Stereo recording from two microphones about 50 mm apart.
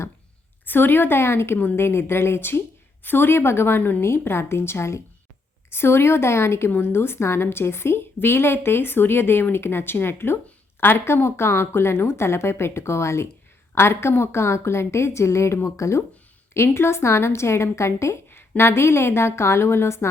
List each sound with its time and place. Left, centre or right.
0.6 s a woman's voice: left
4.3 s a woman's voice: left
13.7 s a woman's voice: left
16.6 s a woman's voice: left
18.3 s a woman's voice: left